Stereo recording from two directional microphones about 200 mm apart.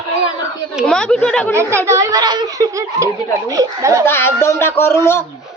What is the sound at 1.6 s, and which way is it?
A child's voice, 15° right (ahead or behind).